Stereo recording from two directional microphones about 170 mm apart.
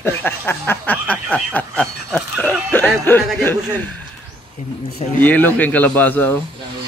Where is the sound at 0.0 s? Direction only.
10° left (ahead or behind).